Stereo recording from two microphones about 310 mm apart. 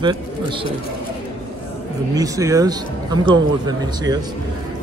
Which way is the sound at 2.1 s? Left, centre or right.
Centre.